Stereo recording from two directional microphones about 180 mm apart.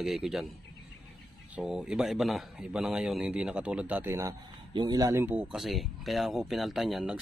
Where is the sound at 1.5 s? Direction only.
5° right (ahead or behind).